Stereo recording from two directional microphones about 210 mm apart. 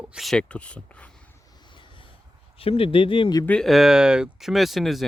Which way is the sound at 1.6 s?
20° left (ahead or behind).